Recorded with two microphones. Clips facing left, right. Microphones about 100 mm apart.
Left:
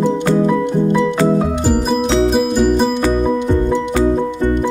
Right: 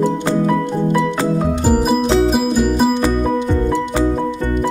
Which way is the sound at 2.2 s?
Centre (ahead or behind).